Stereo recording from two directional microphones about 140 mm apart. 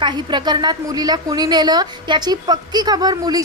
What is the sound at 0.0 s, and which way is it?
A woman's voice, 35° right (ahead or behind).